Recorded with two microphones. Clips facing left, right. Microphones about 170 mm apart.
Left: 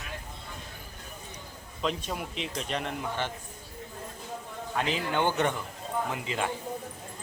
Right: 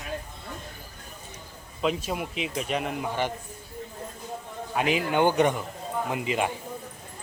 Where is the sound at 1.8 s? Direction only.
5° right (ahead or behind).